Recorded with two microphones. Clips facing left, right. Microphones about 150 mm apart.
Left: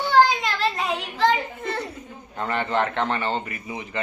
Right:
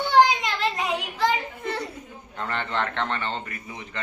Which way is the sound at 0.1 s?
20° right (ahead or behind).